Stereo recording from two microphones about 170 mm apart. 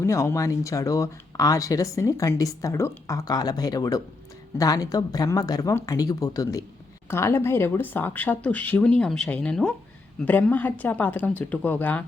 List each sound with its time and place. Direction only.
0.0 s speech: 15° left (ahead or behind)